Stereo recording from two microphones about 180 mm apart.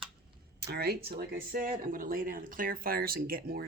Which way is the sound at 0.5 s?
60° right (ahead or behind).